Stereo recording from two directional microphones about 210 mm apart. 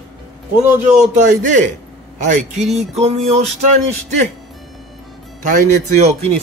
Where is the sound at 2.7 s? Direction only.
Centre (ahead or behind).